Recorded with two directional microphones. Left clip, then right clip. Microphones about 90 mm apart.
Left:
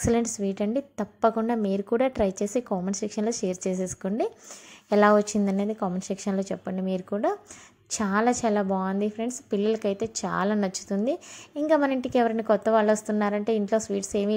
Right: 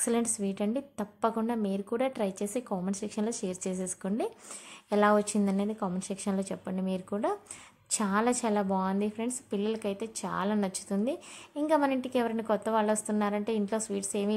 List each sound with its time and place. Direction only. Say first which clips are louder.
0.0 s a woman's voice: left 5 dB; 30° left (ahead or behind)
9.6 s a woman's voice: left 8 dB; 40° left (ahead or behind)